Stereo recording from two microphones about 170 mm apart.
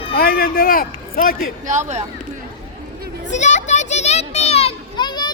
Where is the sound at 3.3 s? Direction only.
45° left (ahead or behind).